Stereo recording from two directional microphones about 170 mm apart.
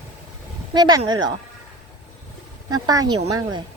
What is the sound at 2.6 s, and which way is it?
Speech, 20° right (ahead or behind).